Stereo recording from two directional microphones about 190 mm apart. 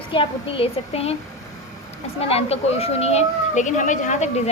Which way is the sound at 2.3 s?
35° left (ahead or behind).